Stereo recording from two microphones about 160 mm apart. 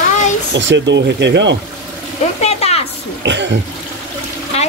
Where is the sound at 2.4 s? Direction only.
40° left (ahead or behind).